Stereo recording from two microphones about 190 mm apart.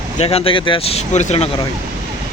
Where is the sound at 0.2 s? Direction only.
30° left (ahead or behind).